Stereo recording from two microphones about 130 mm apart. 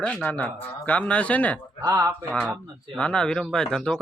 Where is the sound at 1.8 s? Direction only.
25° right (ahead or behind).